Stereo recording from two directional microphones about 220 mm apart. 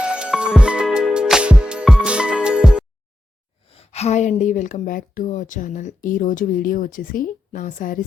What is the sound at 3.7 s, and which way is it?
Speech, 25° left (ahead or behind).